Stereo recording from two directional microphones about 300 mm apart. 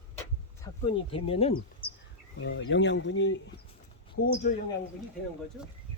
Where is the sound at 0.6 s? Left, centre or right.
Centre.